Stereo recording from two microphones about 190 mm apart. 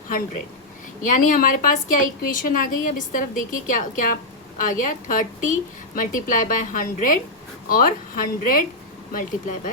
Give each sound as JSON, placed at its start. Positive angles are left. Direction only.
{"t": 1.0, "sound": "a woman's voice", "side_deg": 45}